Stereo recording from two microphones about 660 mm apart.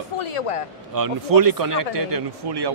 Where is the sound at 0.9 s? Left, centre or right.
Right.